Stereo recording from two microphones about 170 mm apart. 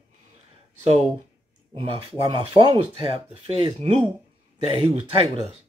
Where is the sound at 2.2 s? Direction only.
20° right (ahead or behind); by 4.0 s 40° right (ahead or behind).